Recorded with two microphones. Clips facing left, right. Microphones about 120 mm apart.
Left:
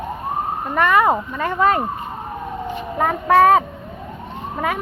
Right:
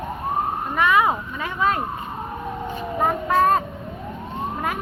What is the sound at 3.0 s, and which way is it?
Speech, 90° left.